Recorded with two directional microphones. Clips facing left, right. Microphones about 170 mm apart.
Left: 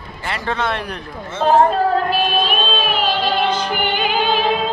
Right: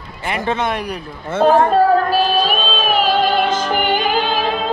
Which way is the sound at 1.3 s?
55° right (ahead or behind).